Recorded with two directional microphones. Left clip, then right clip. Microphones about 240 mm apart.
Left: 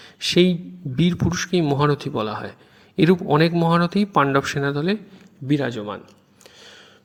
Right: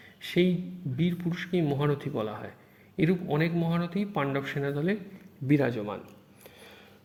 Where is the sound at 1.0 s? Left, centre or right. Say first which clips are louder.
Left 10 dB; left.